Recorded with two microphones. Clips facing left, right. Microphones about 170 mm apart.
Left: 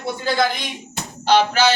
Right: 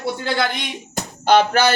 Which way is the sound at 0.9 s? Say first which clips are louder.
Right 2 dB; 50° right (ahead or behind).